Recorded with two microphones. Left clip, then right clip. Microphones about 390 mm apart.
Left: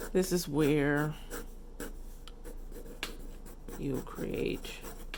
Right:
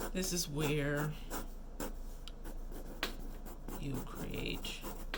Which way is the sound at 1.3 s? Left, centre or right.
Centre.